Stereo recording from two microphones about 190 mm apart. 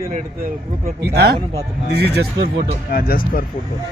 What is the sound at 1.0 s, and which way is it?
Speech, 60° right (ahead or behind).